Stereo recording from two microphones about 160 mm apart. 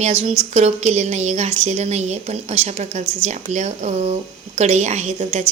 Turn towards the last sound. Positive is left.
turn(degrees=-45)  # may be behind; listen again after turning